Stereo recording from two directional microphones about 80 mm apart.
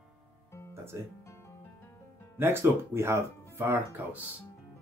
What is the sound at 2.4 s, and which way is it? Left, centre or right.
Speech, right.